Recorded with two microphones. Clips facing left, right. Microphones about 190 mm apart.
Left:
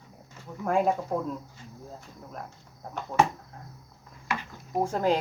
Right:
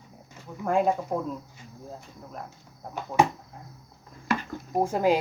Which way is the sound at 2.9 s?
5° right (ahead or behind).